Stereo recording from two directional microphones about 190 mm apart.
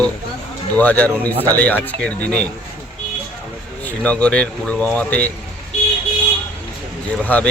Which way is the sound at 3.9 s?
5° left (ahead or behind).